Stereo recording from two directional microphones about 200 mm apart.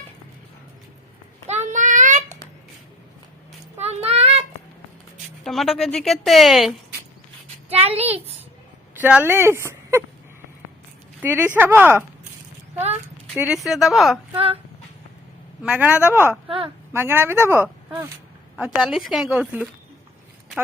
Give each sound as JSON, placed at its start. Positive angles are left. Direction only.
{"t": 1.5, "sound": "child singing", "side_deg": -35}
{"t": 3.8, "sound": "a sound", "side_deg": -30}
{"t": 5.4, "sound": "a woman's voice", "side_deg": 0}
{"t": 7.7, "sound": "a child's voice", "side_deg": -30}
{"t": 9.0, "sound": "speech", "side_deg": -10}
{"t": 11.2, "sound": "a woman's voice", "side_deg": -10}
{"t": 13.3, "sound": "a woman's voice", "side_deg": -5}
{"t": 14.3, "sound": "speech", "side_deg": -30}
{"t": 15.6, "sound": "a woman's voice", "side_deg": -5}
{"t": 16.5, "sound": "speech", "side_deg": -25}
{"t": 16.9, "sound": "a woman's voice", "side_deg": -10}